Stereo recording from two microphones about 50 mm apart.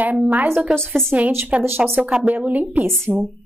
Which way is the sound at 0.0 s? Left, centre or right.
Right.